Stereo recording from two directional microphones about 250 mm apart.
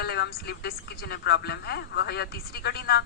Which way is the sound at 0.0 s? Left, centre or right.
Left.